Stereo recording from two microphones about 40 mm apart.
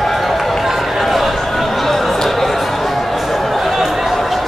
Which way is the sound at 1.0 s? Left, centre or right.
Centre.